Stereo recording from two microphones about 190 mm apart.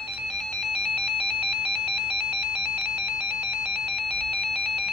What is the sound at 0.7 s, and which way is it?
Ringtone, 55° right (ahead or behind).